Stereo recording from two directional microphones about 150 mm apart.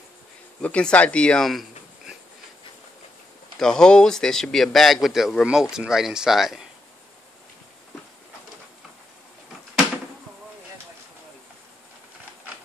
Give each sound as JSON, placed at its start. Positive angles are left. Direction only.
{"t": 0.6, "sound": "speech", "side_deg": 10}
{"t": 3.5, "sound": "a man's voice", "side_deg": 5}